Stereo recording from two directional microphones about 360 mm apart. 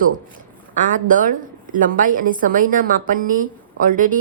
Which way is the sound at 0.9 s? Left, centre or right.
Right.